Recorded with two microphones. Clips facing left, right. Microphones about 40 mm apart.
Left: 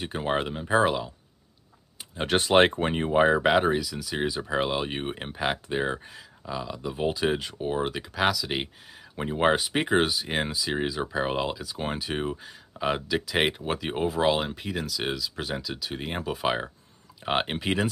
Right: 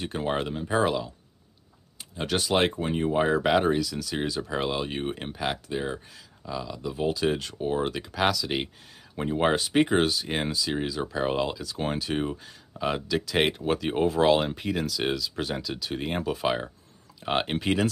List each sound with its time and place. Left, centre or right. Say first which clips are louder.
0.0 s speech: left 1 dB; centre
2.1 s speech: left 4 dB; left
3.1 s speech: left 2 dB; left